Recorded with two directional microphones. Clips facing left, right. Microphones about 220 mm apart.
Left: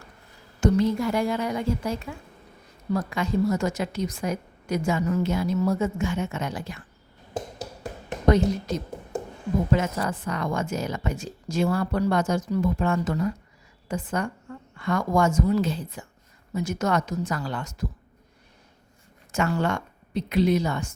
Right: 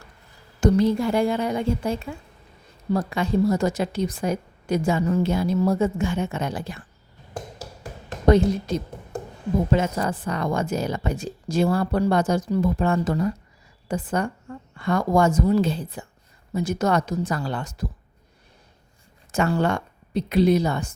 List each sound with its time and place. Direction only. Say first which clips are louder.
0.6 s a woman's voice: right 3 dB; 35° right (ahead or behind)
8.3 s a woman's voice: right 3 dB; 30° right (ahead or behind)
19.3 s speech: right 3 dB; 35° right (ahead or behind)